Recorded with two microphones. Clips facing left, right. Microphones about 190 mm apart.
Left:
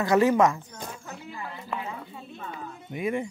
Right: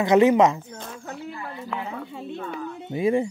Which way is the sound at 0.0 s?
20° right (ahead or behind).